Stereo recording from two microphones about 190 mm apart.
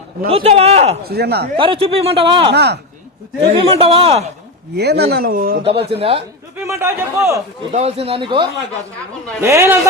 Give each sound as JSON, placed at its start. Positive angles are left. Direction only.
{"t": 0.3, "sound": "speech", "side_deg": -30}
{"t": 1.0, "sound": "speech", "side_deg": -55}
{"t": 1.5, "sound": "speech", "side_deg": -25}
{"t": 2.5, "sound": "speech", "side_deg": -60}
{"t": 3.6, "sound": "speech", "side_deg": -30}
{"t": 4.8, "sound": "speech", "side_deg": -60}
{"t": 5.6, "sound": "speech", "side_deg": -30}
{"t": 6.7, "sound": "a man's voice", "side_deg": -15}
{"t": 7.7, "sound": "speech", "side_deg": -35}
{"t": 9.4, "sound": "a man's voice", "side_deg": -10}